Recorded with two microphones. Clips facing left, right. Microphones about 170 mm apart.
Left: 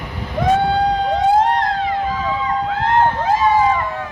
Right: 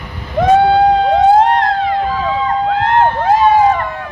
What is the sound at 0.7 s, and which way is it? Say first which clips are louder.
Emergency vehicle: right 7 dB; 65° right (ahead or behind).